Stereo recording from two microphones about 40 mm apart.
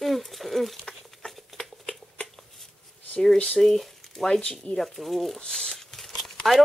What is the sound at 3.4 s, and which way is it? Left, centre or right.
Speech, centre.